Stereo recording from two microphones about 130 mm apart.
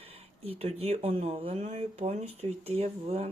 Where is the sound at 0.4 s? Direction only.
50° right (ahead or behind).